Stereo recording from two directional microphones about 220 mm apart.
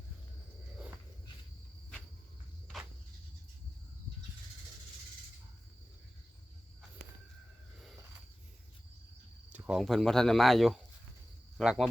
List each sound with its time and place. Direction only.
9.5 s speech: 5° right (ahead or behind)